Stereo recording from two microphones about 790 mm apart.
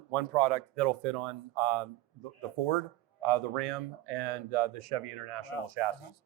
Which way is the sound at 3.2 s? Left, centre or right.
Right.